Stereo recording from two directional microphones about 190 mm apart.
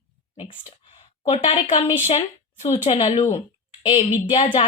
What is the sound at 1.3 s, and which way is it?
A woman's voice, 25° left (ahead or behind).